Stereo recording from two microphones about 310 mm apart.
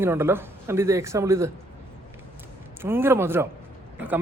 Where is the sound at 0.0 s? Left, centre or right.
Centre.